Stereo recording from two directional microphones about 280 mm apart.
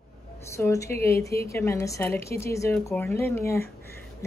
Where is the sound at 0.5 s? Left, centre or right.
Centre.